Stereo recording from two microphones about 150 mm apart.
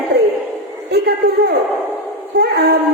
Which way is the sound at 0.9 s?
90° right.